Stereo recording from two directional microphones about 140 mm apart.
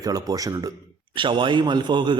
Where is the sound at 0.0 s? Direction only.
25° right (ahead or behind).